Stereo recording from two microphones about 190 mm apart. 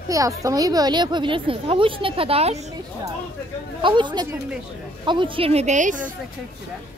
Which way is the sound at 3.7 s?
25° right (ahead or behind).